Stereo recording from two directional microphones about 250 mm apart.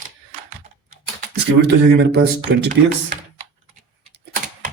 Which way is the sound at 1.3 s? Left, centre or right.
Right.